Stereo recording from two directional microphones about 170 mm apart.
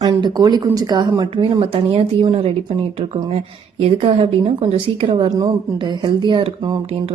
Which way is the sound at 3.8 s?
30° right (ahead or behind).